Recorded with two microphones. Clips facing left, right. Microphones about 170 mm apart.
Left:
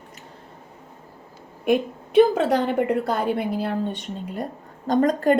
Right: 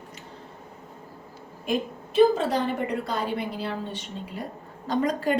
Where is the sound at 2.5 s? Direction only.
55° left (ahead or behind).